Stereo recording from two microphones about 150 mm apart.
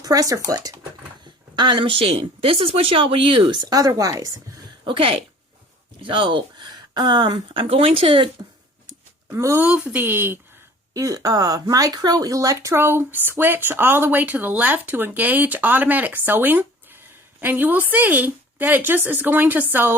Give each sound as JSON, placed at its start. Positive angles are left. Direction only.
{"t": 0.0, "sound": "speech", "side_deg": -25}
{"t": 4.9, "sound": "speech", "side_deg": -35}
{"t": 9.3, "sound": "speech", "side_deg": -20}
{"t": 9.6, "sound": "speech", "side_deg": -5}